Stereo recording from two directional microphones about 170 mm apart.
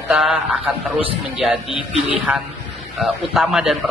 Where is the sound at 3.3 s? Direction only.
Centre (ahead or behind).